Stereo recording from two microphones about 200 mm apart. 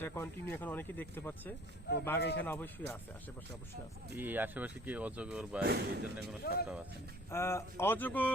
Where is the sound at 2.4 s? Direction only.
10° left (ahead or behind).